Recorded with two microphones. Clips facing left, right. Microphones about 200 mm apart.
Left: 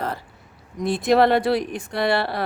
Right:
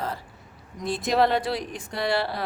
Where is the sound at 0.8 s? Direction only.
65° left (ahead or behind).